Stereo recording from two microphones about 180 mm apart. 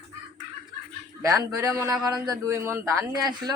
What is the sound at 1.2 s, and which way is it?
A man's voice, 20° right (ahead or behind).